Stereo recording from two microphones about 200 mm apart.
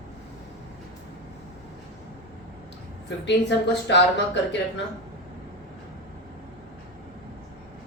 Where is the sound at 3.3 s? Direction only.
60° left (ahead or behind).